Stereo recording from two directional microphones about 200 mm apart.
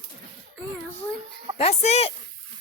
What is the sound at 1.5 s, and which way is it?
Speech, 30° left (ahead or behind).